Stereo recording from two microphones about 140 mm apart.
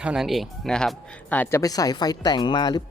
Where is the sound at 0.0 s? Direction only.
5° right (ahead or behind).